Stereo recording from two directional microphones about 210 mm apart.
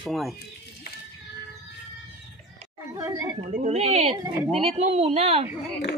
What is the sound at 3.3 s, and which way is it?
A woman's voice, 35° right (ahead or behind).